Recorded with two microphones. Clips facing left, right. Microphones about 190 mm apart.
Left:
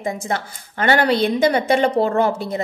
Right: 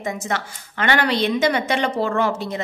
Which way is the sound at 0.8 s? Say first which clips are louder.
Left 3 dB; 40° left (ahead or behind).